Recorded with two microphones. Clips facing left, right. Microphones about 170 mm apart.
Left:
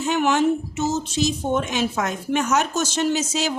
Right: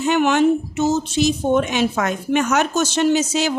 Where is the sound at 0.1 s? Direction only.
65° right (ahead or behind).